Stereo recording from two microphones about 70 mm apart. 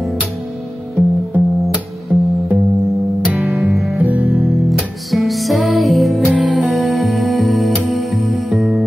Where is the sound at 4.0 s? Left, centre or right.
Right.